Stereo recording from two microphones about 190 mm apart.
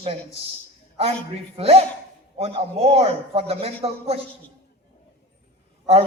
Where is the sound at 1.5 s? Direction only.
30° right (ahead or behind).